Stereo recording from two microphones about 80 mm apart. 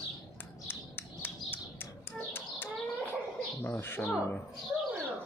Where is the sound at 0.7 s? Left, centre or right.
Left.